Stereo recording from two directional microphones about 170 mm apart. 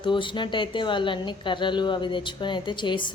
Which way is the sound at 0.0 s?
30° left (ahead or behind).